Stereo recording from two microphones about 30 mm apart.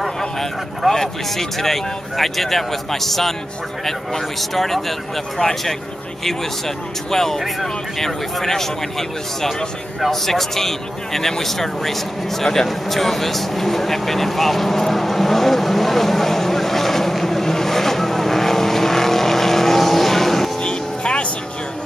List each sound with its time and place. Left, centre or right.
0.4 s speech: centre
7.1 s speech: centre
12.6 s vehicle: centre
20.6 s music: left